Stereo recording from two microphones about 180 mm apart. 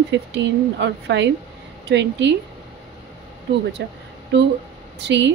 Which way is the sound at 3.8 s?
70° right (ahead or behind).